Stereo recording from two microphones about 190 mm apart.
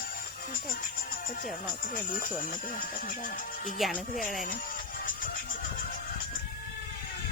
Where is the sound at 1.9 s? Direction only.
45° left (ahead or behind).